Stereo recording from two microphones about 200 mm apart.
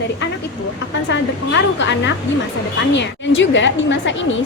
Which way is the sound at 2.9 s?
65° left (ahead or behind).